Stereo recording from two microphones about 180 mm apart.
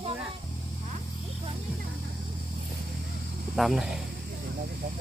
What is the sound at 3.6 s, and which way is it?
Speech, centre (ahead or behind).